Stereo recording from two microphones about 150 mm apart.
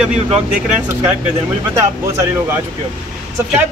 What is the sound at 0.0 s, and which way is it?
Speech, 5° right (ahead or behind).